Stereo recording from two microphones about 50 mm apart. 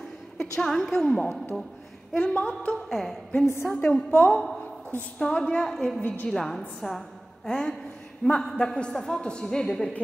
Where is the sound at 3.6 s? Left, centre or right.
Left.